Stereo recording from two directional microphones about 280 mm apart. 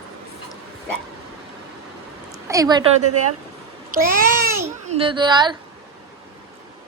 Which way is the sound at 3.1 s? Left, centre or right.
Right.